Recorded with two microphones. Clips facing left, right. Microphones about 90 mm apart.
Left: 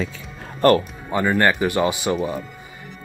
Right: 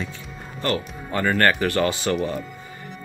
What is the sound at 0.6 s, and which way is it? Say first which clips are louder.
Speech: left 10 dB; 50° left (ahead or behind).